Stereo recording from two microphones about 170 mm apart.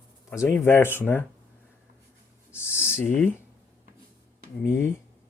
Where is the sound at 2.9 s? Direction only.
15° left (ahead or behind).